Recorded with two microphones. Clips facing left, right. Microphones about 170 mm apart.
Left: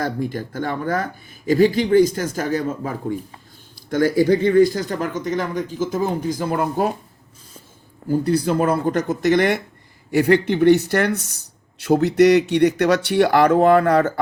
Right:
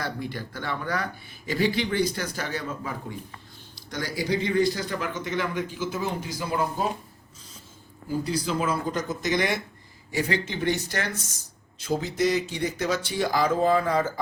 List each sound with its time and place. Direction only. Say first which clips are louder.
0.0 s speech: left 8 dB; 45° left (ahead or behind)
8.2 s speech: left 8 dB; 60° left (ahead or behind)